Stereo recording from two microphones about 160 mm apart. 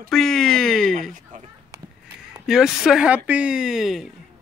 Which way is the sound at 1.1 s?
50° right (ahead or behind).